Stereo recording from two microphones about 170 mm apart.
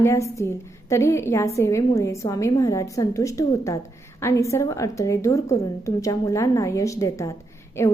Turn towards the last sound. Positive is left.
turn(degrees=15)  # may be behind; listen again after turning